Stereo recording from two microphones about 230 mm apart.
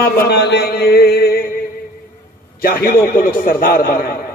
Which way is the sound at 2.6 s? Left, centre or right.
Left.